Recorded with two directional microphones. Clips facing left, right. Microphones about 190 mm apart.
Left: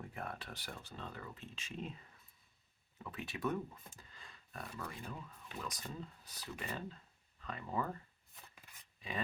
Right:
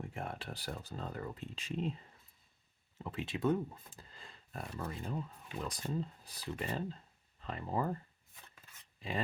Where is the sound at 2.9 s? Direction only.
25° right (ahead or behind).